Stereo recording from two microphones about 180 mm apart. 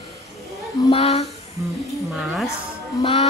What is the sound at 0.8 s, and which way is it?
Speech, 35° left (ahead or behind).